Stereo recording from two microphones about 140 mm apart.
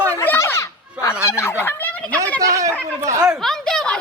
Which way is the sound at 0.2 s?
20° left (ahead or behind).